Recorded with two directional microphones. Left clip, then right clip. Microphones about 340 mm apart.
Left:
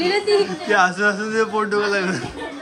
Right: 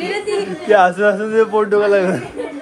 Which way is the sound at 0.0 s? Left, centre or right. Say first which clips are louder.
Left 3 dB; left.